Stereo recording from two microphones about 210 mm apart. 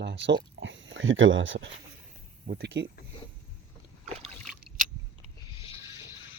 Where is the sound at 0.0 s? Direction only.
55° right (ahead or behind).